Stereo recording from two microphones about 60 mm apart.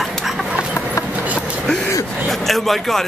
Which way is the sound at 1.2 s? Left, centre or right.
Right.